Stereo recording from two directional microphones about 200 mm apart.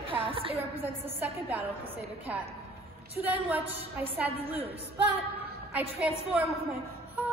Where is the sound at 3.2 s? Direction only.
10° right (ahead or behind).